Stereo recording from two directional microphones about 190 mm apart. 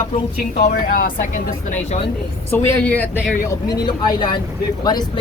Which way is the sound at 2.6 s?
10° left (ahead or behind).